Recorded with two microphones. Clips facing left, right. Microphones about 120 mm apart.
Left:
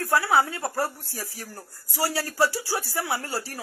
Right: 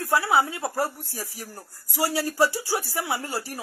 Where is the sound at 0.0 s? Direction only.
20° right (ahead or behind).